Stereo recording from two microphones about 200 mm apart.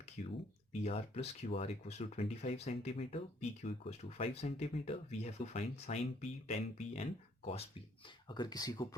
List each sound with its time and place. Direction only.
0.2 s speech: 40° left (ahead or behind); by 9.0 s 20° left (ahead or behind)